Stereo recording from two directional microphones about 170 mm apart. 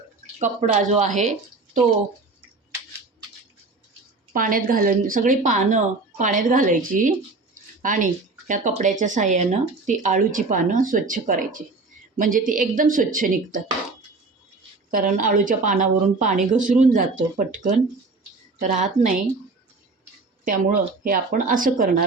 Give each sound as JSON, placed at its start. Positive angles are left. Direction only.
{"t": 0.3, "sound": "speech", "side_deg": -45}
{"t": 4.3, "sound": "speech", "side_deg": -55}
{"t": 14.8, "sound": "speech", "side_deg": -55}
{"t": 20.4, "sound": "speech", "side_deg": -50}